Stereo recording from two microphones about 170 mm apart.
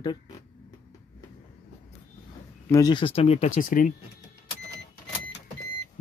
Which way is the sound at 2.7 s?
25° left (ahead or behind).